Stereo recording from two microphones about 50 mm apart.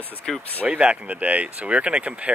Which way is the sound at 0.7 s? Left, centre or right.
Right.